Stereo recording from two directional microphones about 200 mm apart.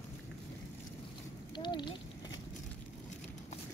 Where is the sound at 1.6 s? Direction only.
25° left (ahead or behind).